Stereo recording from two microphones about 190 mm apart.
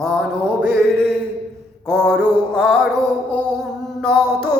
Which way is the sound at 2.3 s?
10° right (ahead or behind).